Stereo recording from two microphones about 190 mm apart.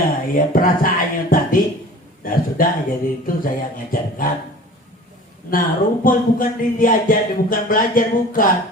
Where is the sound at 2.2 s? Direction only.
45° left (ahead or behind).